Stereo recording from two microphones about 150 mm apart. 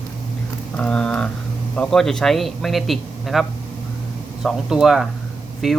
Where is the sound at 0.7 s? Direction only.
5° left (ahead or behind).